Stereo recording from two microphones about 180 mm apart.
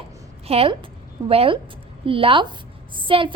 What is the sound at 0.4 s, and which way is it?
A woman's voice, 35° right (ahead or behind).